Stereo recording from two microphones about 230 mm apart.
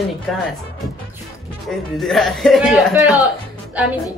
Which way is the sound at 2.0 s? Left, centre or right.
Centre.